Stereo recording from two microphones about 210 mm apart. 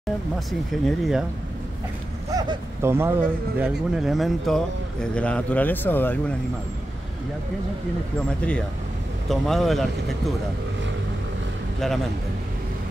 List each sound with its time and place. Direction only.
0.5 s speech: centre (ahead or behind)
2.3 s speech: 20° right (ahead or behind); by 6.3 s 10° left (ahead or behind)
8.4 s speech: 5° left (ahead or behind)